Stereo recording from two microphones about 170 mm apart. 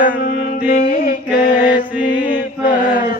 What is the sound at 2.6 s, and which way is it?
Chant, 50° left (ahead or behind).